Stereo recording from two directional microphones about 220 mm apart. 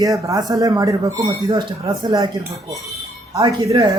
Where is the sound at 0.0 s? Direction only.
15° right (ahead or behind).